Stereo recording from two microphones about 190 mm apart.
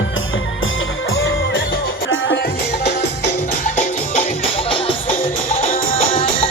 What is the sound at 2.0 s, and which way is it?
Music, 90° left.